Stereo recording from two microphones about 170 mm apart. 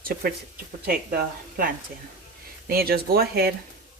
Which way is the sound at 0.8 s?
65° right (ahead or behind).